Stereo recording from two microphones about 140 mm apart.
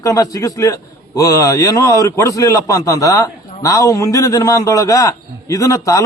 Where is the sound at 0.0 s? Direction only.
25° left (ahead or behind).